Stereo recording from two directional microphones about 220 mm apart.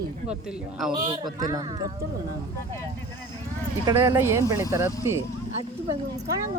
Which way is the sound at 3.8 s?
15° right (ahead or behind).